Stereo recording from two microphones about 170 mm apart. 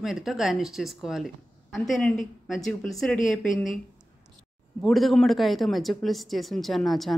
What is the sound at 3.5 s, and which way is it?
Speech, 50° left (ahead or behind).